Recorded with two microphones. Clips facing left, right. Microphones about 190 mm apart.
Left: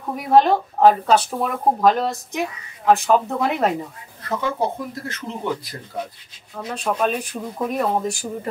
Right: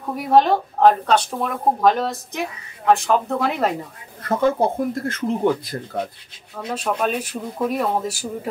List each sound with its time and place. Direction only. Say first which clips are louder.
0.1 s speech: even; centre (ahead or behind)
4.3 s speech: right 5 dB; 50° right (ahead or behind)
6.5 s speech: even; centre (ahead or behind)